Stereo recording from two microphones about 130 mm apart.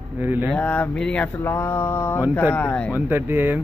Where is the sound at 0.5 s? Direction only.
10° left (ahead or behind).